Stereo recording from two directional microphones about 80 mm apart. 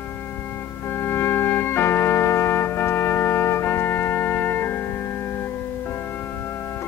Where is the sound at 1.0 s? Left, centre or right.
Left.